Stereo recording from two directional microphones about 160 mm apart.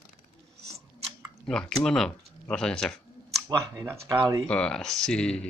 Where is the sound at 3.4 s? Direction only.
20° right (ahead or behind).